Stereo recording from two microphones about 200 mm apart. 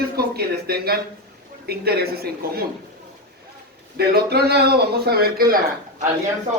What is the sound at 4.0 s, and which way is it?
Speech, 55° right (ahead or behind).